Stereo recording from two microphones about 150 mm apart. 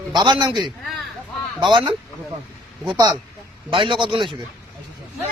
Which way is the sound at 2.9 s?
30° right (ahead or behind).